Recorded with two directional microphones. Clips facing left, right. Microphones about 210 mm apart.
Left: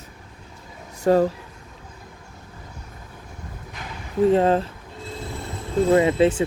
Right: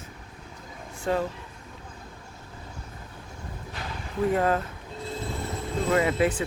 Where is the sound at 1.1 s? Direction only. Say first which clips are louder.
Left 9 dB; 45° left (ahead or behind).